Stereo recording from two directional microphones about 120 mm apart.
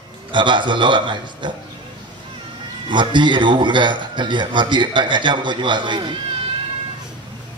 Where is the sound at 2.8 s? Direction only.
40° right (ahead or behind).